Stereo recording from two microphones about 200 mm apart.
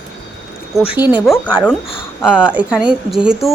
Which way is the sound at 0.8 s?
25° left (ahead or behind).